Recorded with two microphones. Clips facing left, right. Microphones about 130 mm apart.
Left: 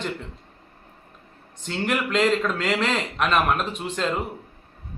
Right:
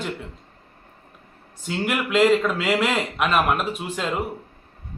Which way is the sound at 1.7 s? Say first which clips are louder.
Right 1 dB; 5° right (ahead or behind).